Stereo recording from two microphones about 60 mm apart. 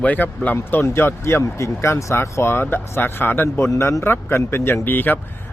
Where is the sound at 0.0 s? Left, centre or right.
Left.